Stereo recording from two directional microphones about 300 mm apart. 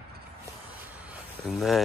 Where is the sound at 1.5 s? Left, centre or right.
Centre.